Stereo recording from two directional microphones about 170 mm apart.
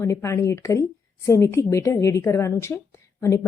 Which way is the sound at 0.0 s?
15° left (ahead or behind).